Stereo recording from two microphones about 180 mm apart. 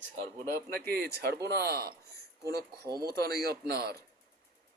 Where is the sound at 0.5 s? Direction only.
60° right (ahead or behind).